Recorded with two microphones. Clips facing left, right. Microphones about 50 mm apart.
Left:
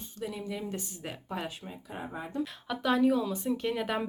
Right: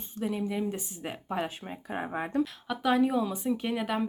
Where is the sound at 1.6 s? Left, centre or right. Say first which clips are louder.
Right 5 dB; right.